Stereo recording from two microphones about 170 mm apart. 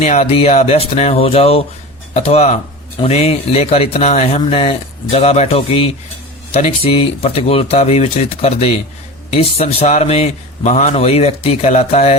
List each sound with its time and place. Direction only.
0.0 s speech: 40° left (ahead or behind)